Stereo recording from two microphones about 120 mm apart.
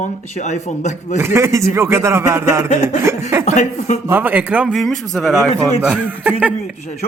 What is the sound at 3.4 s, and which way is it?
Speech, 75° left (ahead or behind).